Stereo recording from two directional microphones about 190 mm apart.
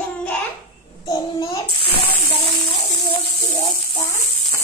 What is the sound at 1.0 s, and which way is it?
Speech, 20° left (ahead or behind).